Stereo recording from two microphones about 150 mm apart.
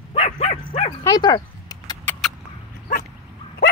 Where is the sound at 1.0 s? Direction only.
25° left (ahead or behind).